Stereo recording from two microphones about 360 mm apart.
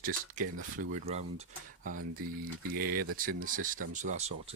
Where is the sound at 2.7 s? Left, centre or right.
Right.